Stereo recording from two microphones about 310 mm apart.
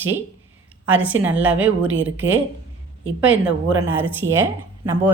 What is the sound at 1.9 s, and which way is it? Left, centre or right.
Speech, right.